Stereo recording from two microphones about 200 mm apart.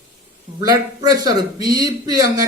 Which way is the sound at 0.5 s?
20° right (ahead or behind).